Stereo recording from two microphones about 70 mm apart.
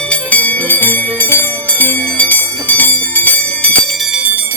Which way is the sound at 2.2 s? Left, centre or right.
Left.